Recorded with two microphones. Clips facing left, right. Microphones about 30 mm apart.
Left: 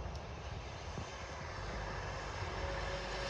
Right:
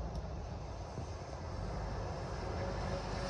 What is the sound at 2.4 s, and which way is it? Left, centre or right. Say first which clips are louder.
Vehicle: right 1 dB; left.